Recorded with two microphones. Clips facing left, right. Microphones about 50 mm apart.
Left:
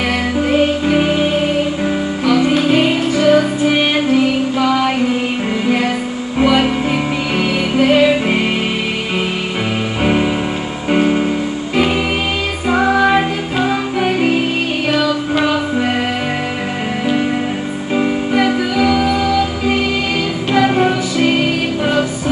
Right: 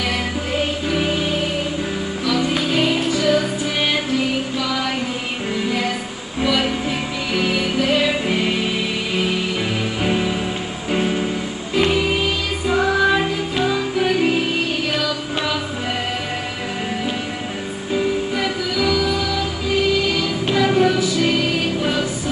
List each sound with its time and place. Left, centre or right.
0.5 s music: left
7.3 s music: left
10.0 s music: left
12.6 s music: left
17.9 s music: left